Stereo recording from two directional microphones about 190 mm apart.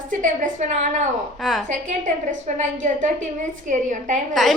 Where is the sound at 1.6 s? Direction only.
40° right (ahead or behind).